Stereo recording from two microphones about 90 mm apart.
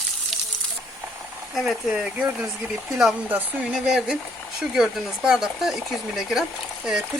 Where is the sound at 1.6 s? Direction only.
Centre (ahead or behind).